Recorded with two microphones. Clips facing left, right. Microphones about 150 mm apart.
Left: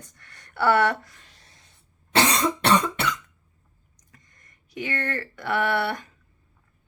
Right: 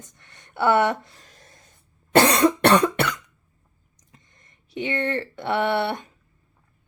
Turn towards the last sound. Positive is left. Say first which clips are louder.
# right 2 dB
turn(degrees=-25)  # may be behind; listen again after turning